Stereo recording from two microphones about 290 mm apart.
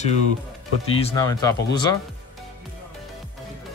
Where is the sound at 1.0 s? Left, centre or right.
Centre.